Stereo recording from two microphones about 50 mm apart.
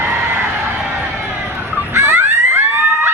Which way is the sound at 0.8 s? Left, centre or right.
Right.